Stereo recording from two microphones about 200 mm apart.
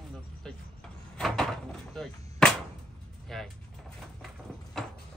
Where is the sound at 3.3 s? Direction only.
Centre (ahead or behind).